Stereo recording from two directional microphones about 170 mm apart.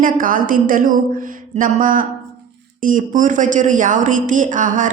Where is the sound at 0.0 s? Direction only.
55° right (ahead or behind).